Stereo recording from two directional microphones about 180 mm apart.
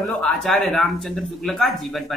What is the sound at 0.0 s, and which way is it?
Speech, 5° left (ahead or behind).